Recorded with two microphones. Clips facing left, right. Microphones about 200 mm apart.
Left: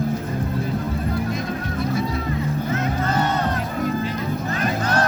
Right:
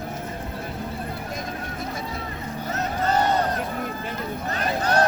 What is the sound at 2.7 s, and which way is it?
Crowd, 35° right (ahead or behind).